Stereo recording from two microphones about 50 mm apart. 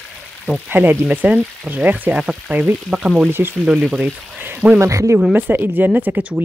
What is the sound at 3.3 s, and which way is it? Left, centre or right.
Speech, right.